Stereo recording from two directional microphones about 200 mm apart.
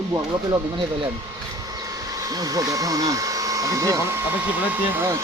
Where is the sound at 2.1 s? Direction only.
20° right (ahead or behind).